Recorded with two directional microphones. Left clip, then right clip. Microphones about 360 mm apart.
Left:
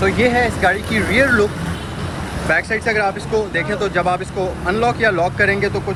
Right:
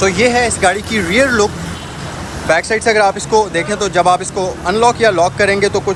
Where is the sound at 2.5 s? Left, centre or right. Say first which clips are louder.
Right 5 dB; centre.